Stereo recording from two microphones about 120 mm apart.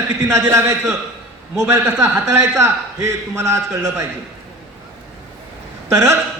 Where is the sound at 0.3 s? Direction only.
25° right (ahead or behind).